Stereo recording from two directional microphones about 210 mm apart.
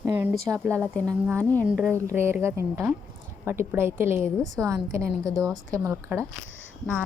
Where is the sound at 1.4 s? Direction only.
10° left (ahead or behind).